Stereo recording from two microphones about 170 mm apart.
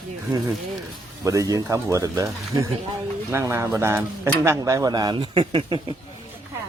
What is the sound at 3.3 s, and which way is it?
Speech, 15° right (ahead or behind).